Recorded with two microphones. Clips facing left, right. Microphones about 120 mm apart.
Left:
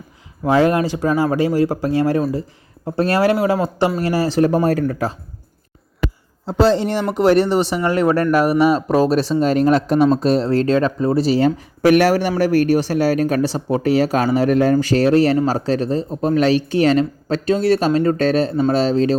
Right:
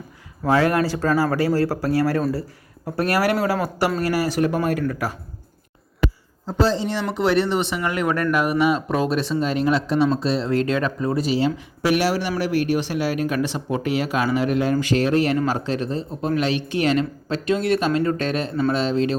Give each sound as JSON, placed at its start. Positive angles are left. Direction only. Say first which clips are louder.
{"t": 0.4, "sound": "a man's voice", "louder": "left 3 dB", "side_deg": 20}
{"t": 6.4, "sound": "a man's voice", "louder": "left 5 dB", "side_deg": 70}
{"t": 7.1, "sound": "a man's voice", "louder": "left 6 dB", "side_deg": 45}
{"t": 11.3, "sound": "a man's voice", "louder": "left 5 dB", "side_deg": 45}